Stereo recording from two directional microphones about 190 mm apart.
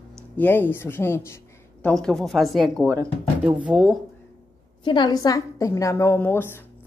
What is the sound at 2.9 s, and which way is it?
Speech, 15° right (ahead or behind).